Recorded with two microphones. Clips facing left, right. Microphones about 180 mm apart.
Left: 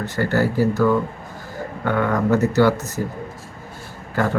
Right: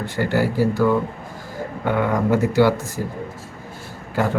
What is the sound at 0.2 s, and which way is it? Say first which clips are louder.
Speech: even; 10° right (ahead or behind).